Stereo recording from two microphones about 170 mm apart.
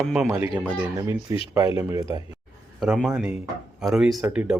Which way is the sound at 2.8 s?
Centre (ahead or behind).